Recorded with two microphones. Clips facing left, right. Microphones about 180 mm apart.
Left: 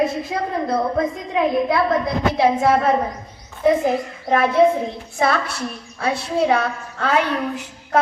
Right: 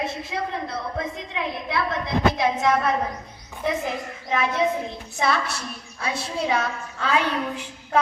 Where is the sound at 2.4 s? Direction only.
35° left (ahead or behind).